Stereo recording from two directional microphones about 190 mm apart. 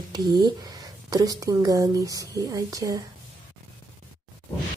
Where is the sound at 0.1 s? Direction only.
20° right (ahead or behind).